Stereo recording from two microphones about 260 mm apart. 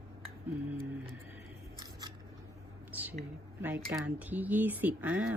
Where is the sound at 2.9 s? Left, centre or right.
Centre.